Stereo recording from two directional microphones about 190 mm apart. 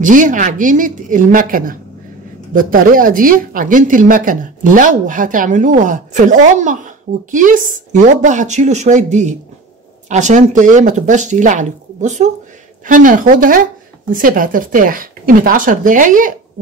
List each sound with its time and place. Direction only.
0.0 s speech: 45° right (ahead or behind)